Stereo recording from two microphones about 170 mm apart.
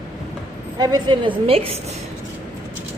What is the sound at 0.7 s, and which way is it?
A woman's voice, 25° right (ahead or behind).